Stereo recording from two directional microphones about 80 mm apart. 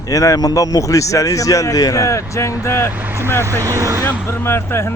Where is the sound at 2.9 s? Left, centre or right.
Right.